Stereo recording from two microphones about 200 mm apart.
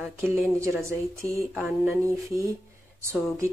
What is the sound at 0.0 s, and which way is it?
A woman's voice, 10° right (ahead or behind).